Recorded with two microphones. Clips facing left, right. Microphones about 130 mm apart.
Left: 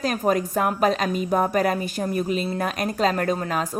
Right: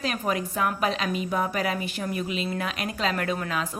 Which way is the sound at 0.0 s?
40° left (ahead or behind).